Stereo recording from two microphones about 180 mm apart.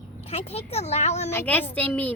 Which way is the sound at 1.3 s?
10° left (ahead or behind).